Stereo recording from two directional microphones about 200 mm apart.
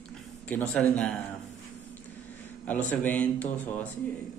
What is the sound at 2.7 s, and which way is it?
A man's voice, 10° left (ahead or behind).